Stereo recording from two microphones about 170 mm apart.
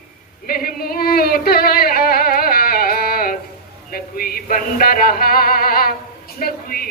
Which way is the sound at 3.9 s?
60° left (ahead or behind).